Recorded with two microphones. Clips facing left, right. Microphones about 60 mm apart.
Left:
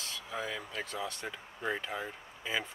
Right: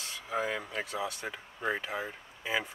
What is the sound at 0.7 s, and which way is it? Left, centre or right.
Speech, centre.